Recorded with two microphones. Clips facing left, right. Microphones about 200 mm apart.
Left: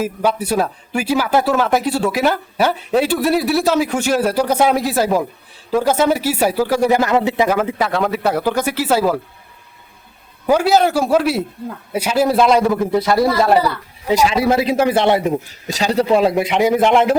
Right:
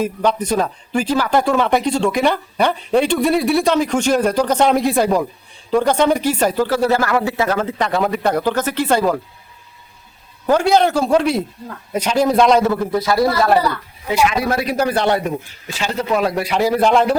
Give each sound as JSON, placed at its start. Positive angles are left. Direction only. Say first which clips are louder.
{"t": 0.0, "sound": "a man's voice", "louder": "even", "side_deg": 5}
{"t": 10.4, "sound": "speech", "louder": "even", "side_deg": 5}
{"t": 13.5, "sound": "a man's voice", "louder": "left 1 dB", "side_deg": 5}
{"t": 14.1, "sound": "a man's voice", "louder": "left 2 dB", "side_deg": 40}
{"t": 14.3, "sound": "a man's voice", "louder": "left 3 dB", "side_deg": 25}
{"t": 15.6, "sound": "a man's voice", "louder": "left 6 dB", "side_deg": 35}